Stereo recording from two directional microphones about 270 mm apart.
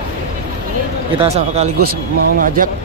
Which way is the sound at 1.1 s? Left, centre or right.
Right.